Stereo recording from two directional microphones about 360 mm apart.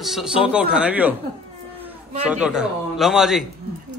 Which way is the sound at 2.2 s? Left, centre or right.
Centre.